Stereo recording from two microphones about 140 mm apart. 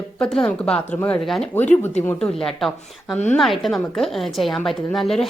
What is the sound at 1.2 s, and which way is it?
A woman's voice, centre (ahead or behind).